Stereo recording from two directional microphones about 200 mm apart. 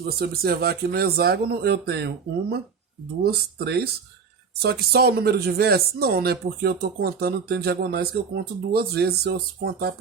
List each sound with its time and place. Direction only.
0.0 s speech: 50° right (ahead or behind)